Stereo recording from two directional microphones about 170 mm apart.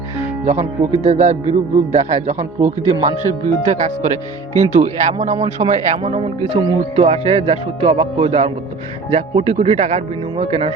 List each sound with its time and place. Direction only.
0.4 s speech: 45° right (ahead or behind)